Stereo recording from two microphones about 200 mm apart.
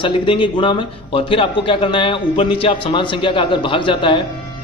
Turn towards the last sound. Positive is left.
turn(degrees=25)  # may be behind; listen again after turning